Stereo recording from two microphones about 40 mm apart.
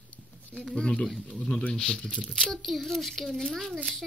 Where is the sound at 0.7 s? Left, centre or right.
Left.